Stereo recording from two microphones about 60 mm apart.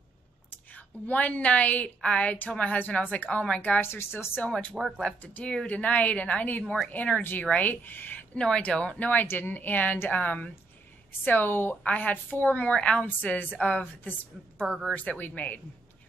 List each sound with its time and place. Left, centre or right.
0.7 s a woman's voice: left
3.8 s speech: left
4.4 s a woman's voice: centre
4.7 s speech: centre
5.0 s a woman's voice: left
8.4 s a woman's voice: centre
15.0 s a woman's voice: left